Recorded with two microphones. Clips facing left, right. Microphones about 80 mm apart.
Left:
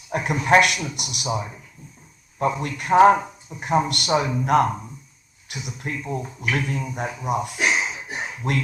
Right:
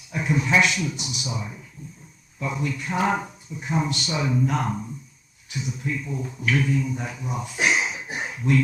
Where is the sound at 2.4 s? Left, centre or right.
Left.